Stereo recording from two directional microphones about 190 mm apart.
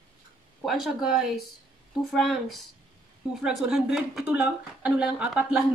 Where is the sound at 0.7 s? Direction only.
Centre (ahead or behind).